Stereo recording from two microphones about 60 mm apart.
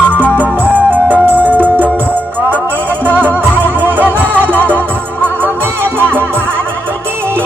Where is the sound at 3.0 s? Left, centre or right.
Right.